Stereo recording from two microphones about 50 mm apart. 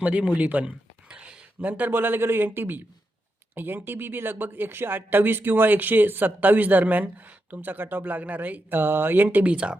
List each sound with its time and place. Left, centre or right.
0.0 s a sound: right
1.6 s speech: right
1.9 s speech: right
9.4 s speech: right